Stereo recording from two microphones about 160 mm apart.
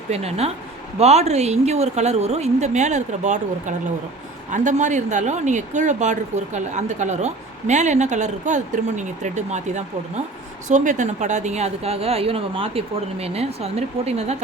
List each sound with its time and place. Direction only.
0.1 s a woman's voice: 40° right (ahead or behind)